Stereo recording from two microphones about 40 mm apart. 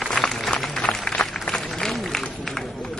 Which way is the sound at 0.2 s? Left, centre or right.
Left.